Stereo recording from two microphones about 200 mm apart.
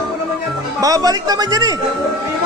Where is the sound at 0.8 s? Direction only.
20° right (ahead or behind).